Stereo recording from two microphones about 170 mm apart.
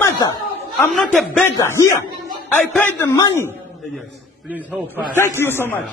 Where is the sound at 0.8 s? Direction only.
Centre (ahead or behind).